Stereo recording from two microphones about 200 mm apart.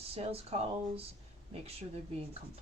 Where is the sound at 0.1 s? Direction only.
30° right (ahead or behind).